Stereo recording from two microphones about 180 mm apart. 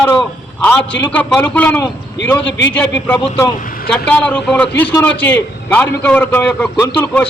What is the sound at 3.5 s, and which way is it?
Speech, 50° left (ahead or behind).